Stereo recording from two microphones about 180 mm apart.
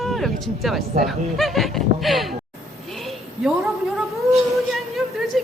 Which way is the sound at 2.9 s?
Centre (ahead or behind).